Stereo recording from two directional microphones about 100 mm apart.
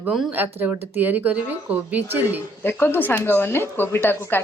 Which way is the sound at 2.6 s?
20° left (ahead or behind).